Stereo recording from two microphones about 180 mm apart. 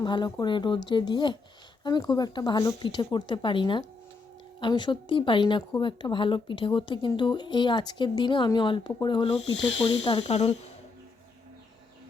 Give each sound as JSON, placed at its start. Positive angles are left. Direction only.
{"t": 0.0, "sound": "speech", "side_deg": 25}
{"t": 10.1, "sound": "speech", "side_deg": 35}